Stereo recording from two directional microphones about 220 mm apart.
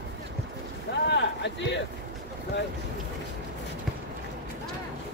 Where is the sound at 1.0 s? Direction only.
50° left (ahead or behind).